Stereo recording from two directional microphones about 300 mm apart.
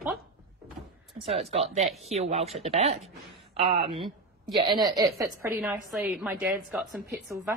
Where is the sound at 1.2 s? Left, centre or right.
Centre.